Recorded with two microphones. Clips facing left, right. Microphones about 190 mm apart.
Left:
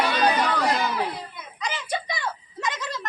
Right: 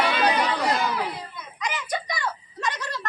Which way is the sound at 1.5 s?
30° left (ahead or behind).